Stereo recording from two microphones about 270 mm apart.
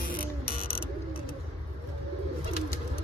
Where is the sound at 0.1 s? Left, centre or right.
Left.